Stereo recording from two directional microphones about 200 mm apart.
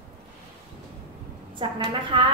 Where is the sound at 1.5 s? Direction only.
25° right (ahead or behind).